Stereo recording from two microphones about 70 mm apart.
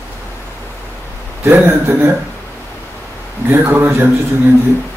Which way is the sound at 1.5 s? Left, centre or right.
Right.